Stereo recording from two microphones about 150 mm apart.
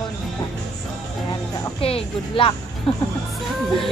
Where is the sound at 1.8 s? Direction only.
40° left (ahead or behind).